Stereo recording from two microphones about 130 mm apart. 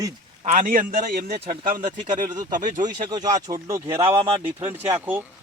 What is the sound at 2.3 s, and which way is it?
Speech, 30° right (ahead or behind).